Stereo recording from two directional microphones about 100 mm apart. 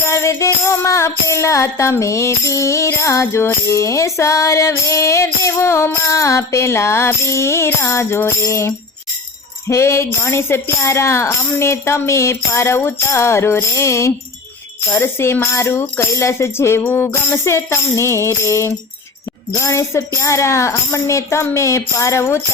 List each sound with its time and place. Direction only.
0.0 s music: 30° left (ahead or behind)